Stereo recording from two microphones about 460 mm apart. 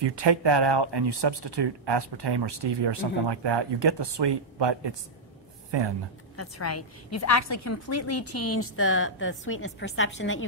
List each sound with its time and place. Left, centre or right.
0.0 s speech: right
6.3 s a woman's voice: left